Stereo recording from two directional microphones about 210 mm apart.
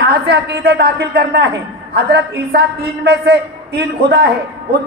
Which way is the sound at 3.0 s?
50° right (ahead or behind).